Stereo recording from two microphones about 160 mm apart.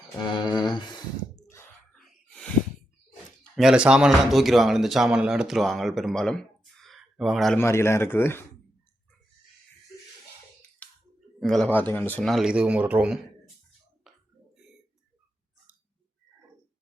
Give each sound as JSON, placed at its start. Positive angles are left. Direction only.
{"t": 0.3, "sound": "a sound", "side_deg": 30}
{"t": 1.9, "sound": "gasp", "side_deg": 5}
{"t": 3.5, "sound": "speech", "side_deg": -5}
{"t": 7.6, "sound": "speech", "side_deg": 15}
{"t": 10.8, "sound": "clicking", "side_deg": 10}
{"t": 11.3, "sound": "speech", "side_deg": 0}
{"t": 12.2, "sound": "speech", "side_deg": 0}